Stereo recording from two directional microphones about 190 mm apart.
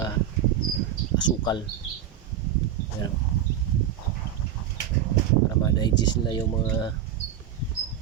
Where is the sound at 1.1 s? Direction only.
25° left (ahead or behind).